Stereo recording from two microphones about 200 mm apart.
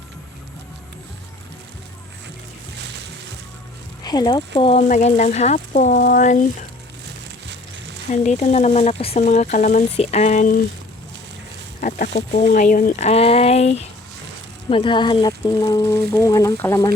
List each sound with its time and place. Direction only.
4.0 s speech: 20° left (ahead or behind)
4.8 s speech: 35° left (ahead or behind)
7.4 s music: 60° right (ahead or behind)
8.1 s speech: 35° left (ahead or behind)
11.8 s speech: 40° left (ahead or behind); by 16.9 s 10° left (ahead or behind)